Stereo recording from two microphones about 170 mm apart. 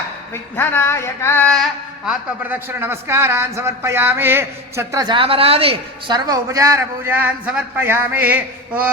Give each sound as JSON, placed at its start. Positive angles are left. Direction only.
{"t": 0.5, "sound": "a sound", "side_deg": 15}
{"t": 2.0, "sound": "a man's voice", "side_deg": -10}
{"t": 6.1, "sound": "a man's voice", "side_deg": -20}